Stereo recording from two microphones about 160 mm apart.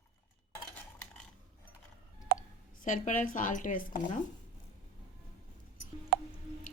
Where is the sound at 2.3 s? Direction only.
70° right (ahead or behind).